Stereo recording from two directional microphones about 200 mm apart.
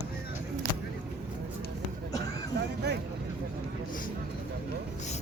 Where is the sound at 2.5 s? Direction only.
55° right (ahead or behind).